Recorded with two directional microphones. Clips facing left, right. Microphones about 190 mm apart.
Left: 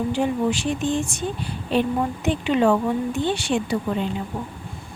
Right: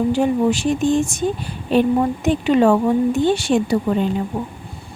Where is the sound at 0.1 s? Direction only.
45° right (ahead or behind).